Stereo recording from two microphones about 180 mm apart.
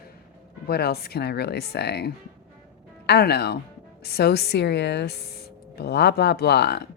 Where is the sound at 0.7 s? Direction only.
60° left (ahead or behind).